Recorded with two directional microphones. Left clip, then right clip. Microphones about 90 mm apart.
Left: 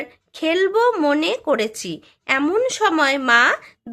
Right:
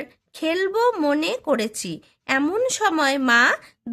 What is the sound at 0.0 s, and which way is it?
Speech, 35° right (ahead or behind).